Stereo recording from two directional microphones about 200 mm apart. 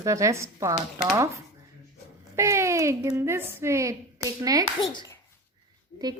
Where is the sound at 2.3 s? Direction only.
15° right (ahead or behind).